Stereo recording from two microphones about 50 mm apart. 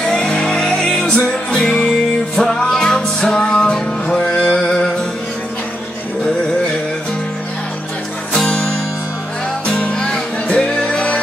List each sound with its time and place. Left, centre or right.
0.0 s music: centre
8.3 s music: centre
9.7 s music: centre